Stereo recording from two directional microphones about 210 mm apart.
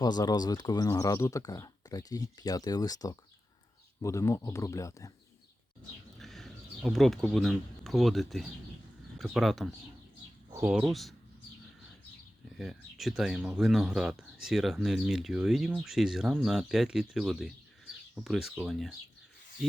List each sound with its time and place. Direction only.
0.0 s speech: 20° left (ahead or behind)
6.1 s speech: centre (ahead or behind)
12.5 s speech: centre (ahead or behind)